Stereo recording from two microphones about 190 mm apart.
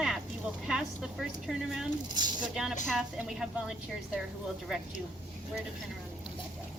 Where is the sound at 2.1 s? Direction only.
20° right (ahead or behind).